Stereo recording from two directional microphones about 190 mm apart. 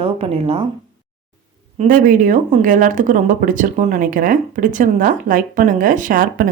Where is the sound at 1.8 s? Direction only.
45° right (ahead or behind).